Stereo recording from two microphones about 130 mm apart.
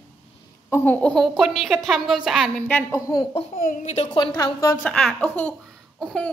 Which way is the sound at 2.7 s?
15° left (ahead or behind).